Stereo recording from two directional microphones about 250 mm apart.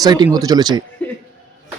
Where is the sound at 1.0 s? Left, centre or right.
Centre.